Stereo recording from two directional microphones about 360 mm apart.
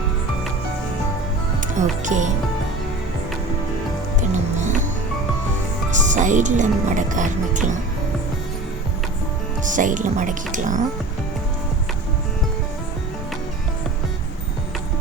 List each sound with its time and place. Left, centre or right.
1.6 s speech: right
4.2 s music: centre
5.9 s speech: centre
9.6 s speech: right